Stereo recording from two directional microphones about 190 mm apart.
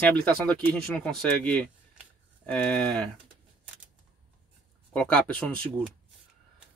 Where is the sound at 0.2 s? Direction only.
5° left (ahead or behind).